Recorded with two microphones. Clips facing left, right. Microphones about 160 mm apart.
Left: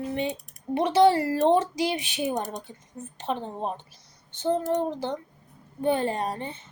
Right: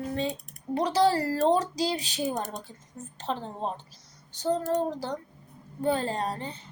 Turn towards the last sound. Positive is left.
turn(degrees=20)  # may be behind; listen again after turning